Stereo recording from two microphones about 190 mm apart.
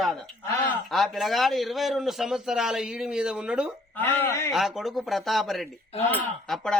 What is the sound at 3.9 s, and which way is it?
Speech, 10° left (ahead or behind).